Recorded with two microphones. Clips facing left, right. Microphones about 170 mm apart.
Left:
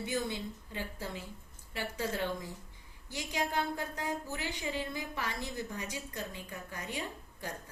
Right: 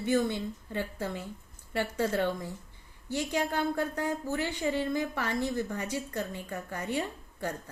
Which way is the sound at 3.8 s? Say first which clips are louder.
Right 6 dB; 55° right (ahead or behind).